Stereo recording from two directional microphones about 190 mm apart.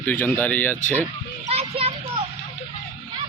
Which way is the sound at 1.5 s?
30° right (ahead or behind).